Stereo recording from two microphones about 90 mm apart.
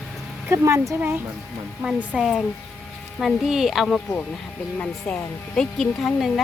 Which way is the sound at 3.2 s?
Centre (ahead or behind).